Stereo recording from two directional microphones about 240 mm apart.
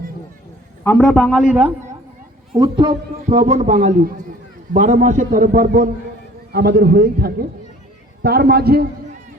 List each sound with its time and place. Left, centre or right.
0.9 s a man's voice: centre
2.5 s a man's voice: right